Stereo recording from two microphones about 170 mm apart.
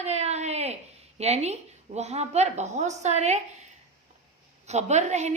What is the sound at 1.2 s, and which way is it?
A woman's voice, 40° right (ahead or behind).